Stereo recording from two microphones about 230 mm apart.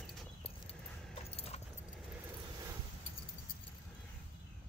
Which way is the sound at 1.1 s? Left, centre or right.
Left.